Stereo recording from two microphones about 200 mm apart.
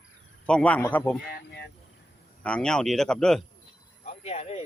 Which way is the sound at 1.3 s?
55° left (ahead or behind).